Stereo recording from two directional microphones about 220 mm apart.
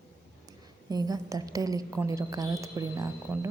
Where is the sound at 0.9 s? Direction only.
15° right (ahead or behind).